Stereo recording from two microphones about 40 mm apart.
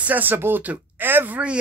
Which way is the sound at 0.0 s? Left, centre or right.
Right.